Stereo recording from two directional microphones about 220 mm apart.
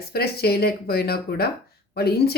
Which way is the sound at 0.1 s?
45° left (ahead or behind).